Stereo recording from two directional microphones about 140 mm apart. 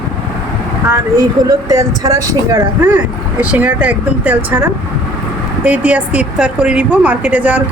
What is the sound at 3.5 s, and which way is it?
A woman's voice, 10° right (ahead or behind).